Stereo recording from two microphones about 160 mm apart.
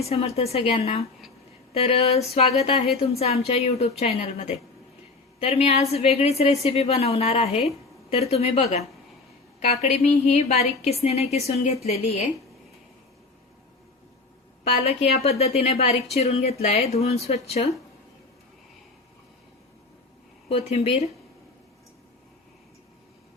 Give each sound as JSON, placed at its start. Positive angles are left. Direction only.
{"t": 0.0, "sound": "a woman's voice", "side_deg": 40}
{"t": 14.6, "sound": "a woman's voice", "side_deg": 40}
{"t": 20.5, "sound": "a woman's voice", "side_deg": 40}